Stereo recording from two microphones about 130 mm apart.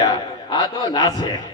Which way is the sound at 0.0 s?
30° left (ahead or behind).